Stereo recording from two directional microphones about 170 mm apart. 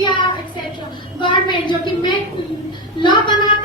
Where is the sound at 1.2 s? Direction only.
25° left (ahead or behind).